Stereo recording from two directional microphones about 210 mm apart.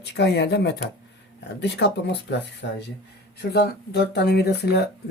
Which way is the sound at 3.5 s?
50° left (ahead or behind).